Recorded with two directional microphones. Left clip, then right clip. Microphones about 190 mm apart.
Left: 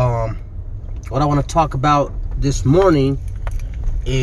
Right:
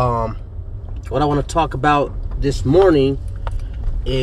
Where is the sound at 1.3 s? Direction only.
10° left (ahead or behind).